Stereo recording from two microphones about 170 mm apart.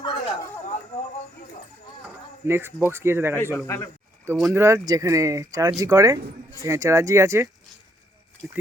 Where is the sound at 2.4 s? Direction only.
15° right (ahead or behind).